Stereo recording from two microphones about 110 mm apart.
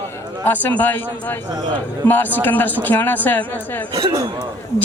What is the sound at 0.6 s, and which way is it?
Speech, 15° left (ahead or behind).